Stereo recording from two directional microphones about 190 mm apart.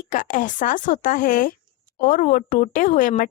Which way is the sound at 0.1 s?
45° left (ahead or behind).